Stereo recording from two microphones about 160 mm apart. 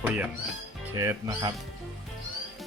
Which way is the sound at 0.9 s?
20° right (ahead or behind).